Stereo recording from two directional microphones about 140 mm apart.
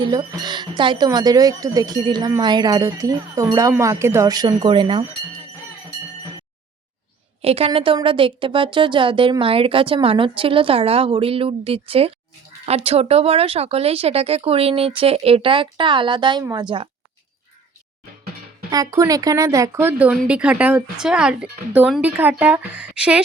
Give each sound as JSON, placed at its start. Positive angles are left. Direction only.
{"t": 0.0, "sound": "speech", "side_deg": -35}
{"t": 7.4, "sound": "a woman's voice", "side_deg": -45}
{"t": 18.7, "sound": "speech", "side_deg": -25}